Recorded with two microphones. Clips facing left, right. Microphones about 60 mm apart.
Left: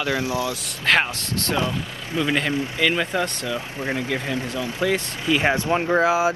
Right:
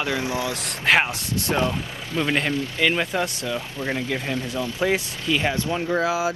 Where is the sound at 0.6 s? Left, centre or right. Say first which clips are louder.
Right 2 dB; centre.